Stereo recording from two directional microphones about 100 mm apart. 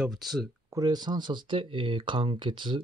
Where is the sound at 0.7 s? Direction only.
40° right (ahead or behind).